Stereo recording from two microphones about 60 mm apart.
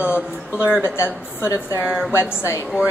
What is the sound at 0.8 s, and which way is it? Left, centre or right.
Speech, left.